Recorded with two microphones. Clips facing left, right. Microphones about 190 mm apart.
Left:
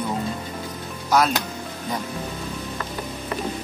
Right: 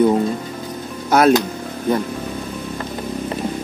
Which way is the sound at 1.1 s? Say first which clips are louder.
Right 7 dB; 60° right (ahead or behind).